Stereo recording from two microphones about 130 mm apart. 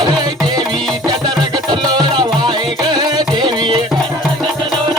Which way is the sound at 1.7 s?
35° right (ahead or behind).